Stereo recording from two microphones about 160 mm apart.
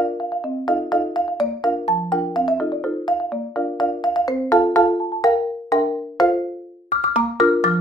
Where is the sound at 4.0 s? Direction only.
25° left (ahead or behind).